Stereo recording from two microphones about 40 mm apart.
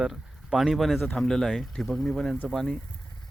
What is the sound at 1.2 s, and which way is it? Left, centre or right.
Speech, centre.